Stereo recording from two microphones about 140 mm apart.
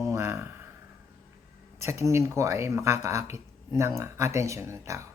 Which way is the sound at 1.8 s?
20° right (ahead or behind).